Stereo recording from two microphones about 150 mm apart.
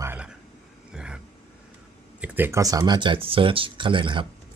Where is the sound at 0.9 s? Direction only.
5° right (ahead or behind).